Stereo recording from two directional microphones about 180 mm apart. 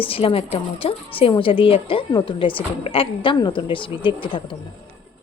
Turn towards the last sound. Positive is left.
turn(degrees=25)  # may be behind; listen again after turning